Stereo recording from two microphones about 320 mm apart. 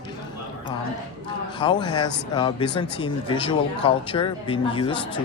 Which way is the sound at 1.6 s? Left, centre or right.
Centre.